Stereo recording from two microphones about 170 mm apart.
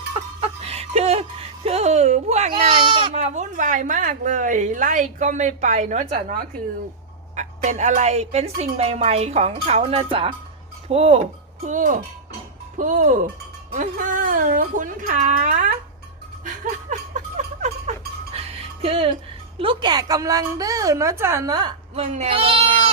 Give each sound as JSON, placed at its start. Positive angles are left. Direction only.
{"t": 0.4, "sound": "music", "side_deg": -35}
{"t": 2.5, "sound": "speech", "side_deg": -30}
{"t": 11.6, "sound": "speech", "side_deg": -50}
{"t": 16.4, "sound": "a sound", "side_deg": -50}
{"t": 18.3, "sound": "music", "side_deg": -35}
{"t": 19.5, "sound": "a woman's voice", "side_deg": -30}
{"t": 21.9, "sound": "speech", "side_deg": -40}